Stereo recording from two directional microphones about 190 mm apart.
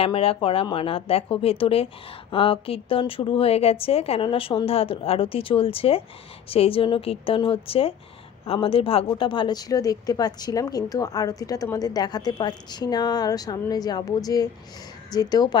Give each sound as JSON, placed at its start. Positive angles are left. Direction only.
{"t": 0.0, "sound": "speech", "side_deg": 30}